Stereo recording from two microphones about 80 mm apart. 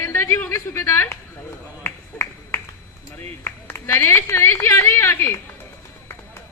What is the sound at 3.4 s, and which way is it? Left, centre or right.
A woman's voice, left.